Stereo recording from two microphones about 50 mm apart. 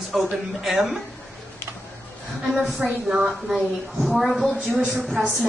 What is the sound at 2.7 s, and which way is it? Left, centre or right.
Speech, centre.